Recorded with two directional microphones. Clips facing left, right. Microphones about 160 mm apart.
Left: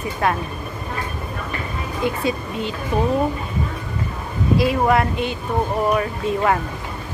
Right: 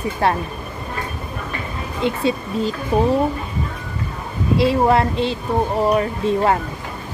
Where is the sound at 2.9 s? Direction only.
35° right (ahead or behind).